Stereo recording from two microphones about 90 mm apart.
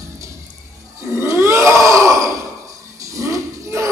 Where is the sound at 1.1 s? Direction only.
30° right (ahead or behind).